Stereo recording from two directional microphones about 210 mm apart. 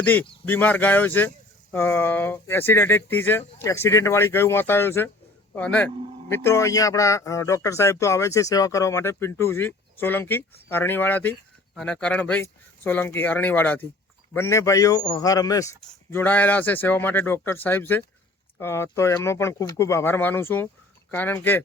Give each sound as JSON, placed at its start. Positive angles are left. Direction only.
{"t": 0.0, "sound": "speech", "side_deg": 10}